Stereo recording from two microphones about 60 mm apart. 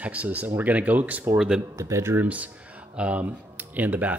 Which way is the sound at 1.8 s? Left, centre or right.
Right.